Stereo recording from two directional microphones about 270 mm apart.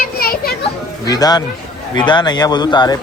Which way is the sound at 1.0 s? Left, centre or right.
Centre.